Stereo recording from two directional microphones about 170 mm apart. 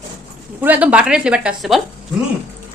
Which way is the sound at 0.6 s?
10° right (ahead or behind).